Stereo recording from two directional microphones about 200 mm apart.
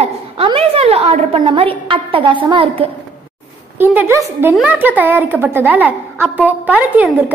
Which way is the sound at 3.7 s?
10° right (ahead or behind).